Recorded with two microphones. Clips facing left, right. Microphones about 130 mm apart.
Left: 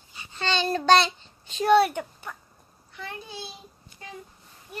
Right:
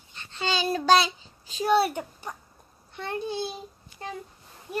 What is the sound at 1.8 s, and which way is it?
Speech, 35° right (ahead or behind).